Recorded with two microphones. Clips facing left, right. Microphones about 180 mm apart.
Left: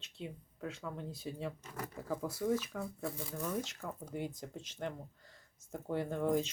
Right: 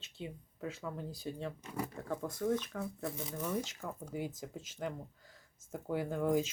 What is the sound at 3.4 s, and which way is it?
Speech, 5° right (ahead or behind).